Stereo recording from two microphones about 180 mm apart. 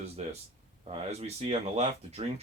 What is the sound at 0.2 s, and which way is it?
Speech, 35° right (ahead or behind).